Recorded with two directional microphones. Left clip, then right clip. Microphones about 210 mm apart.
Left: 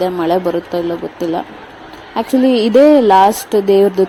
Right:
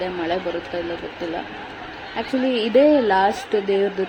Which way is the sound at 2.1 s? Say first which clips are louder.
Left 9 dB; 30° left (ahead or behind).